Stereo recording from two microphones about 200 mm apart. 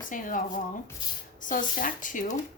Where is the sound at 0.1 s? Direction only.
40° left (ahead or behind).